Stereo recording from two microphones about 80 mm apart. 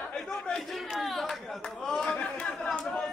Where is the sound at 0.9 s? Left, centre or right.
Centre.